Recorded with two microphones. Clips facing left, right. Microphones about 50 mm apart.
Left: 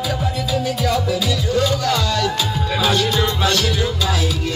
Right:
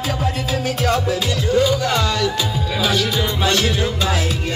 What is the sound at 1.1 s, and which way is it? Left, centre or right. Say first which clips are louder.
Music: even; right.